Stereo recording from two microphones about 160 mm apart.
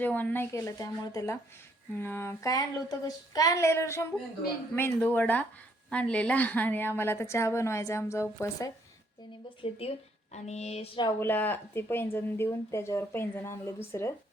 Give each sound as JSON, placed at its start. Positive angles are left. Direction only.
{"t": 0.0, "sound": "speech", "side_deg": 10}
{"t": 9.6, "sound": "speech", "side_deg": 40}
{"t": 10.3, "sound": "a sound", "side_deg": 45}
{"t": 11.2, "sound": "speech", "side_deg": 10}